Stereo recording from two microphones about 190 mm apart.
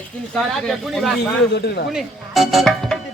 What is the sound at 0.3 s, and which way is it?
Speech, centre (ahead or behind).